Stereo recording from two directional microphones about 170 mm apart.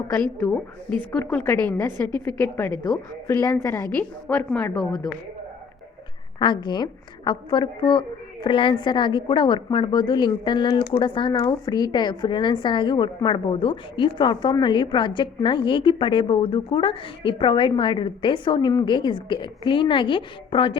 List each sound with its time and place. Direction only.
0.3 s a woman's voice: 10° left (ahead or behind)
6.4 s a woman's voice: 25° left (ahead or behind)